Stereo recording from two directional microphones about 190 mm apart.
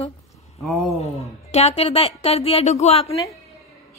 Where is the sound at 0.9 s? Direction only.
35° left (ahead or behind).